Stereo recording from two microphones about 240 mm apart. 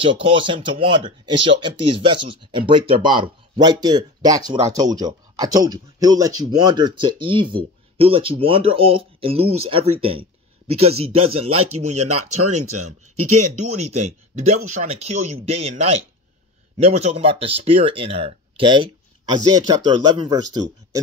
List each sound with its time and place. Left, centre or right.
0.0 s speech: right
11.4 s speech: right
13.9 s speech: right